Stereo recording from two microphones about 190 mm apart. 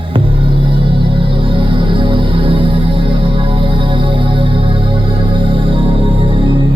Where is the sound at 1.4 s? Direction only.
25° right (ahead or behind).